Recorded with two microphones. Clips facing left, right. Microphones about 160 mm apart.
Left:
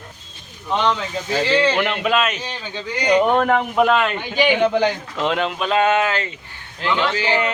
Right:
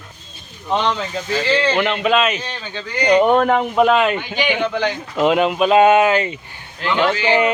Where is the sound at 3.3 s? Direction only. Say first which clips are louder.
Right 2 dB; 5° right (ahead or behind).